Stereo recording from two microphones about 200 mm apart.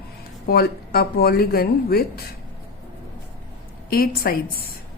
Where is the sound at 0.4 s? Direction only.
50° left (ahead or behind).